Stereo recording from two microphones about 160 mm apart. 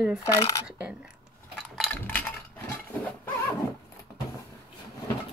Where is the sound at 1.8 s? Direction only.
10° left (ahead or behind).